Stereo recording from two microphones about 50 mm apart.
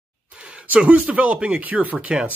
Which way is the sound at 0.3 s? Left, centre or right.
Right.